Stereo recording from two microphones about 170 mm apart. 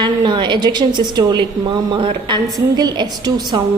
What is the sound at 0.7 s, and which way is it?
A woman's voice, 25° right (ahead or behind).